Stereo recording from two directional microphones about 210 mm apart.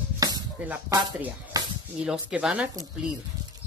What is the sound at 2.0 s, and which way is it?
Speech, 5° right (ahead or behind).